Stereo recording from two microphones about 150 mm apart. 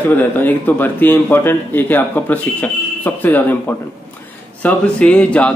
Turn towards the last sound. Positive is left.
turn(degrees=10)  # may be behind; listen again after turning